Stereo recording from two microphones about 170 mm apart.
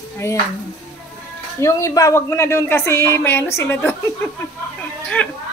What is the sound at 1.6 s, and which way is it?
A woman's voice, 15° left (ahead or behind).